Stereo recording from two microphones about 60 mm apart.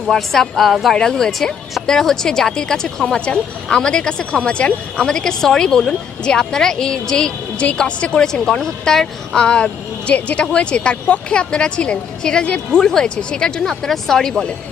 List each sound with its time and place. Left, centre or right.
0.1 s speech: centre